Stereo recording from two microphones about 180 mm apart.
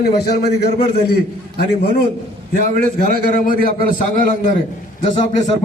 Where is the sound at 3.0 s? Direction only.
50° right (ahead or behind).